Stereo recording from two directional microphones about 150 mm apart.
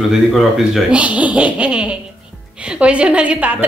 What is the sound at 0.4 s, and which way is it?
A woman's voice, 5° right (ahead or behind).